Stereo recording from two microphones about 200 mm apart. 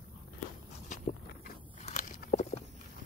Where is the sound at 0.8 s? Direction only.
40° left (ahead or behind).